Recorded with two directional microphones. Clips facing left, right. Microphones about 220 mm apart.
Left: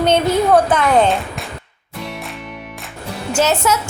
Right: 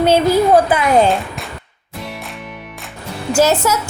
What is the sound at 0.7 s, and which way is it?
Speech, 5° right (ahead or behind).